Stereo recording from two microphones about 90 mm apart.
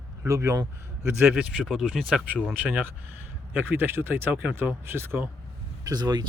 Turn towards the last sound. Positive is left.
turn(degrees=-45)  # may be behind; listen again after turning